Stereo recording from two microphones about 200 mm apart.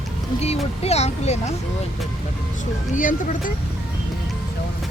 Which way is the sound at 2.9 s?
40° left (ahead or behind).